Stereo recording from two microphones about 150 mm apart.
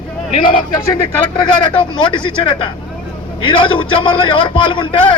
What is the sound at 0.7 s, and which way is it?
Speech, 30° left (ahead or behind).